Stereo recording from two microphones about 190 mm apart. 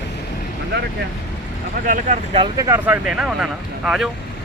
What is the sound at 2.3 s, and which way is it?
Speech, 20° right (ahead or behind).